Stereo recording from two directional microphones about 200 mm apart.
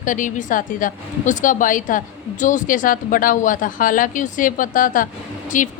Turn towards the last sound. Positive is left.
turn(degrees=40)  # may be behind; listen again after turning